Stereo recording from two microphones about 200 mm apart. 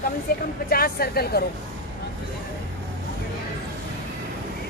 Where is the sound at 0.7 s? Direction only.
50° left (ahead or behind).